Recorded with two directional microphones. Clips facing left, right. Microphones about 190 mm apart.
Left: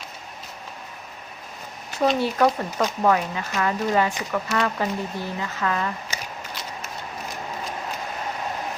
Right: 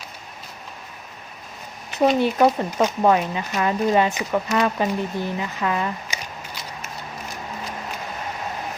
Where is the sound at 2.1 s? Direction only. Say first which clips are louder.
Right 3 dB; 20° right (ahead or behind).